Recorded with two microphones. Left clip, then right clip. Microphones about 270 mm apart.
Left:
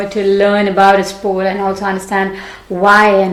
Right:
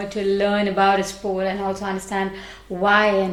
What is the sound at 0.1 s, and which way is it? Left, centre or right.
A woman's voice, right.